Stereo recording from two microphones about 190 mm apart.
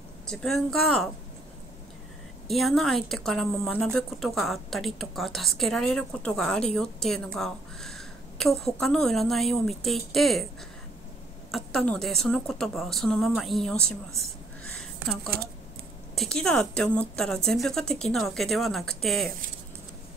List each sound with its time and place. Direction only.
0.3 s a woman's voice: centre (ahead or behind)
2.4 s a woman's voice: centre (ahead or behind)
11.5 s a woman's voice: 5° left (ahead or behind)
15.3 s speech: 55° right (ahead or behind)
16.2 s a woman's voice: 5° left (ahead or behind)